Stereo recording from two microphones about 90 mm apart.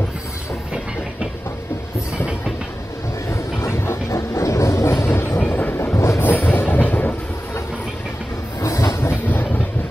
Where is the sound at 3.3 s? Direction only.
30° left (ahead or behind).